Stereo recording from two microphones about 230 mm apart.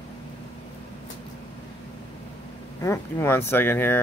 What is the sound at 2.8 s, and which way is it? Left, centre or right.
Speech, centre.